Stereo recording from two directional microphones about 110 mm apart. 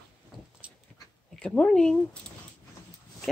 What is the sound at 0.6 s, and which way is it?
Dog, 10° right (ahead or behind).